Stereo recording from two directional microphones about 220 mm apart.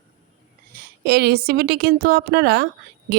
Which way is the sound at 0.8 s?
45° right (ahead or behind).